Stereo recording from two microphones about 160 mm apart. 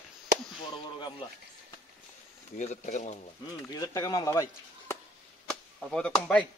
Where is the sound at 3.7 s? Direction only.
25° left (ahead or behind).